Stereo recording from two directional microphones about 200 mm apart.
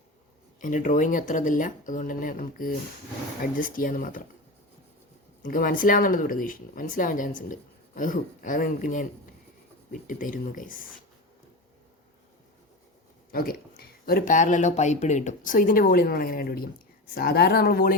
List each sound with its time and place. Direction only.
0.6 s speech: 40° left (ahead or behind)
5.4 s speech: 45° left (ahead or behind)
13.3 s speech: 45° left (ahead or behind)